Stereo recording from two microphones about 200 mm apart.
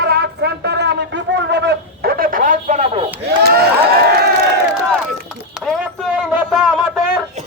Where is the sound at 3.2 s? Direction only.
50° right (ahead or behind).